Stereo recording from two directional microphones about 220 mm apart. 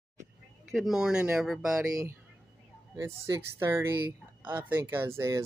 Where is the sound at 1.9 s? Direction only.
15° right (ahead or behind).